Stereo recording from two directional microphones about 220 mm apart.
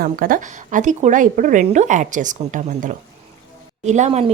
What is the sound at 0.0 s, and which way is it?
A woman's voice, 40° right (ahead or behind).